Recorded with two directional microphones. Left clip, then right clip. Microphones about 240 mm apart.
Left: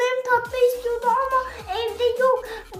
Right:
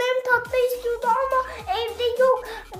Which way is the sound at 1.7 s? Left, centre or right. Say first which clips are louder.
Left 1 dB; centre.